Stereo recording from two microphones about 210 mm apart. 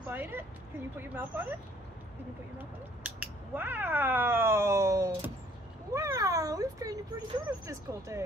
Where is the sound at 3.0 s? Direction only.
10° right (ahead or behind).